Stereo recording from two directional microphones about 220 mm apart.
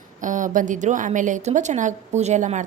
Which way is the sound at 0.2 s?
35° right (ahead or behind).